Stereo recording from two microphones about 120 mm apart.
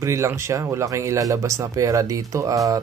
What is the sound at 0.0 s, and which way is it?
Speech, 25° right (ahead or behind).